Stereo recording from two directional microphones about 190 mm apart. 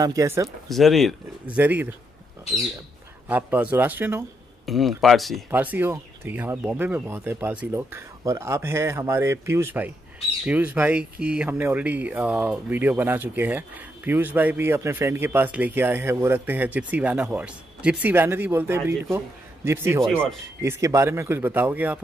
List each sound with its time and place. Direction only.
0.0 s speech: 15° right (ahead or behind)
0.7 s speech: centre (ahead or behind)
3.3 s speech: 10° right (ahead or behind)
4.6 s speech: centre (ahead or behind)